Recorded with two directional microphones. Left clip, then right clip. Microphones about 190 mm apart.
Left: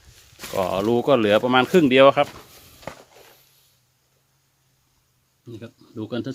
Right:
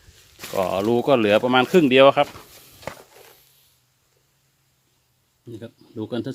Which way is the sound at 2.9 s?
50° right (ahead or behind).